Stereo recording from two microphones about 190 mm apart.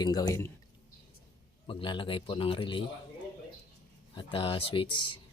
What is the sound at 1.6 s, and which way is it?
A man's voice, 25° left (ahead or behind).